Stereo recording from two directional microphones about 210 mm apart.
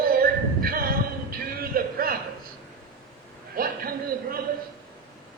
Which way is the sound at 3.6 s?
45° right (ahead or behind).